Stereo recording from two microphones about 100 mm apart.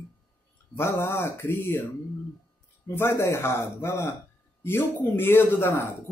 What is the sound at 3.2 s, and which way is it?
Speech, 25° left (ahead or behind).